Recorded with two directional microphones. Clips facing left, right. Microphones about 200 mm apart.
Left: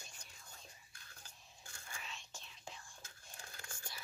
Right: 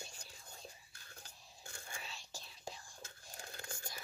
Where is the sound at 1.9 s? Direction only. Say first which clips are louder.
Even; 35° right (ahead or behind).